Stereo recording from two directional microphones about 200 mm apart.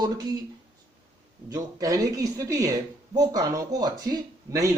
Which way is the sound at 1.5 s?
15° right (ahead or behind).